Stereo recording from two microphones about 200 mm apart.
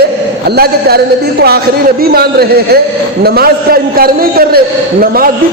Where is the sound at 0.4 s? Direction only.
50° right (ahead or behind).